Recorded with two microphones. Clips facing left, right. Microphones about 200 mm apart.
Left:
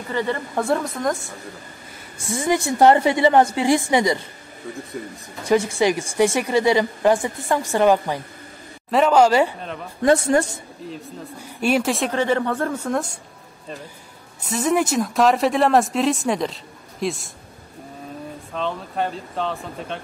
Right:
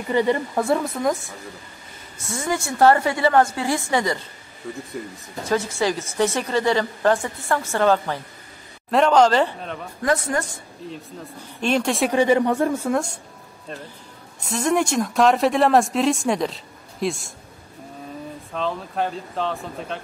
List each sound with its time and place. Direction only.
0.1 s speech: 15° right (ahead or behind)
0.6 s speech: centre (ahead or behind)
2.2 s speech: 15° left (ahead or behind)
4.6 s speech: centre (ahead or behind)
5.5 s speech: 15° left (ahead or behind)
10.0 s a woman's voice: 25° left (ahead or behind)
10.9 s speech: 10° left (ahead or behind)
12.1 s speech: 15° right (ahead or behind)
14.5 s speech: centre (ahead or behind)
18.5 s speech: centre (ahead or behind)